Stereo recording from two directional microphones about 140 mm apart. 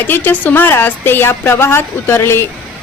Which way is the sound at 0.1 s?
15° left (ahead or behind).